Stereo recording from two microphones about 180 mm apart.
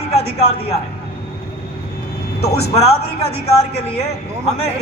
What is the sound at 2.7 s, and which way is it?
A man's voice, 35° left (ahead or behind).